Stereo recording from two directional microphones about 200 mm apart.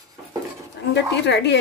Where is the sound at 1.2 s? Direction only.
60° left (ahead or behind).